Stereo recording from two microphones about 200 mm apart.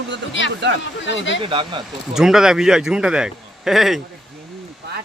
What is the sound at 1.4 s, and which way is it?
Speech, 25° right (ahead or behind).